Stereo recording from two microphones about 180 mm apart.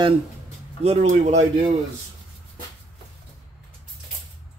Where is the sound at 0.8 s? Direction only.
35° right (ahead or behind).